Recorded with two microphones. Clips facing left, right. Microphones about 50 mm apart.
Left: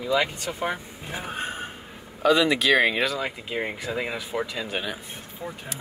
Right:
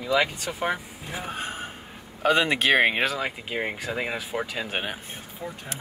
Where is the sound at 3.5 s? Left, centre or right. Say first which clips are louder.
Left 2 dB; centre.